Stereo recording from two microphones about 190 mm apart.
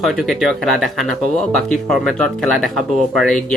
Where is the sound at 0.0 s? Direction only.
Centre (ahead or behind).